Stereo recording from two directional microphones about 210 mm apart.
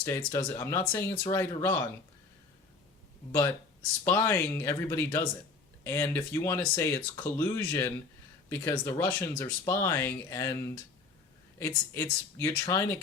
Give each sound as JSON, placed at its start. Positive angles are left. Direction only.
{"t": 0.2, "sound": "speech", "side_deg": 15}
{"t": 1.4, "sound": "speech", "side_deg": 10}
{"t": 4.0, "sound": "speech", "side_deg": 10}